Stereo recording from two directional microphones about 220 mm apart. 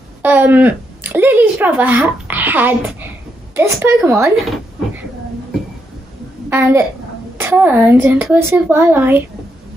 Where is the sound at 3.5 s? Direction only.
10° right (ahead or behind).